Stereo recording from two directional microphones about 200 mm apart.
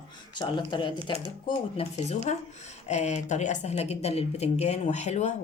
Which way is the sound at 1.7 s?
35° left (ahead or behind).